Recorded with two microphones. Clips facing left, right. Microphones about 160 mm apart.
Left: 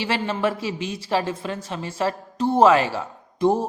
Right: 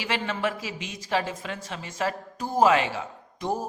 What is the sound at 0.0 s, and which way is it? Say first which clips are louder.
A man's voice: left 5 dB; 30° left (ahead or behind).